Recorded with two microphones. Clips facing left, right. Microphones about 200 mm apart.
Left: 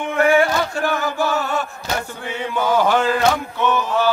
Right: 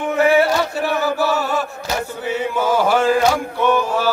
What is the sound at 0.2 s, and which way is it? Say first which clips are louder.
Chant: right 1 dB; 5° right (ahead or behind).